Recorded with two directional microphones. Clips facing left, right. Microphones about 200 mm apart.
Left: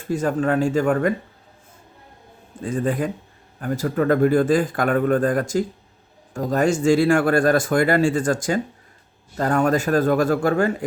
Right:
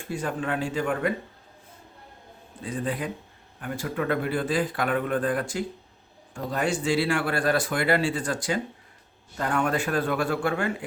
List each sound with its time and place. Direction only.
0.1 s speech: 45° left (ahead or behind)
2.6 s a man's voice: 45° left (ahead or behind)